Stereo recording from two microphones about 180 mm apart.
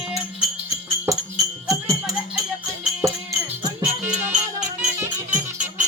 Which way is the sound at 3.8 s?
5° right (ahead or behind).